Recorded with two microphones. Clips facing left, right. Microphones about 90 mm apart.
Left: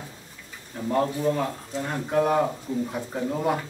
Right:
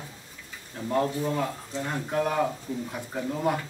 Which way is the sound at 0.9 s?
5° left (ahead or behind).